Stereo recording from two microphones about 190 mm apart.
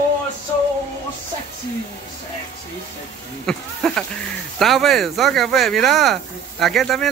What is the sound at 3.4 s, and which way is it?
Speech, 5° left (ahead or behind).